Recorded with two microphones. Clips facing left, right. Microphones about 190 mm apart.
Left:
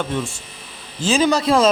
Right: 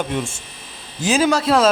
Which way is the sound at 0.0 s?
20° right (ahead or behind).